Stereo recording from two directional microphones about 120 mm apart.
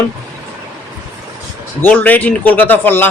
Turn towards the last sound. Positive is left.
turn(degrees=15)  # may be behind; listen again after turning